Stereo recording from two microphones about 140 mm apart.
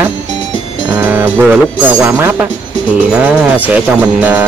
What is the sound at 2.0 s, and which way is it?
Speech, 15° right (ahead or behind).